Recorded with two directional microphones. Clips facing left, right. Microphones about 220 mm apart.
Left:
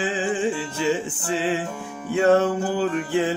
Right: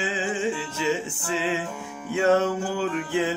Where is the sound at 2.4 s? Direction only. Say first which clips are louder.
Left 3 dB; 35° left (ahead or behind).